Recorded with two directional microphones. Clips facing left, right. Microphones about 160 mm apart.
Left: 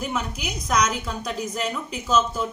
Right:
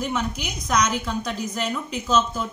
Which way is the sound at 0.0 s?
5° left (ahead or behind).